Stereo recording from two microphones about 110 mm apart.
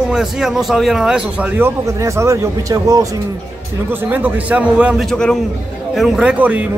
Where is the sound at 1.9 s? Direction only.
25° right (ahead or behind).